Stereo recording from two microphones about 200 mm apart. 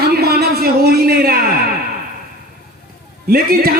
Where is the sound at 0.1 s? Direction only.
50° right (ahead or behind).